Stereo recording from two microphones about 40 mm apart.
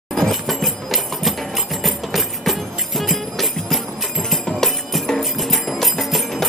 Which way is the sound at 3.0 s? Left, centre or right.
Centre.